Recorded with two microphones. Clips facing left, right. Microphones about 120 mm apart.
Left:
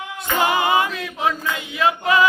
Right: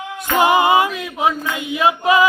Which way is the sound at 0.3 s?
20° right (ahead or behind).